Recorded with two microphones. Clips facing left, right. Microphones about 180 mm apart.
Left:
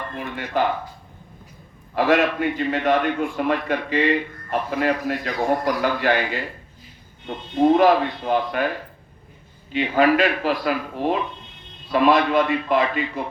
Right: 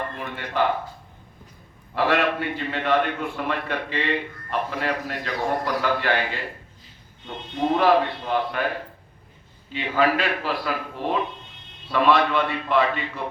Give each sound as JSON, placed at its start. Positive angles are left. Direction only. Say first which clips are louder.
{"t": 0.3, "sound": "a man's voice", "louder": "left 2 dB", "side_deg": 45}
{"t": 2.0, "sound": "a man's voice", "louder": "left 3 dB", "side_deg": 45}
{"t": 9.7, "sound": "a man's voice", "louder": "left 4 dB", "side_deg": 45}